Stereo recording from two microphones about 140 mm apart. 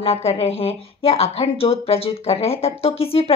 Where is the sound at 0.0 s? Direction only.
45° left (ahead or behind).